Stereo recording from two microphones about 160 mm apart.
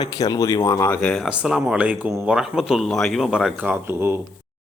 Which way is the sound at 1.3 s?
5° right (ahead or behind).